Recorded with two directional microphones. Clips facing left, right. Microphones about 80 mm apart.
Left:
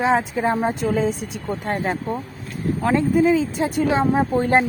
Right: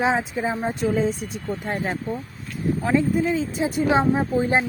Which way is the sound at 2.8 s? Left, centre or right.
Left.